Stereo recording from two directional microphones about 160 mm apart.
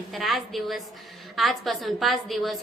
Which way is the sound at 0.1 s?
Centre (ahead or behind).